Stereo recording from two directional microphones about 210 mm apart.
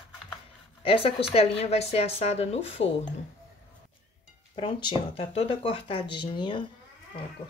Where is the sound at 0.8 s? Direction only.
25° left (ahead or behind).